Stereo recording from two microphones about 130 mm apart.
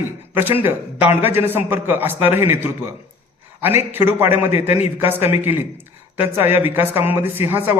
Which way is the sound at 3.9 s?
15° right (ahead or behind).